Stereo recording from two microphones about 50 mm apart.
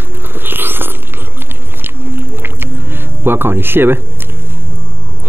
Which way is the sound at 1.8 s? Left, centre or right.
Right.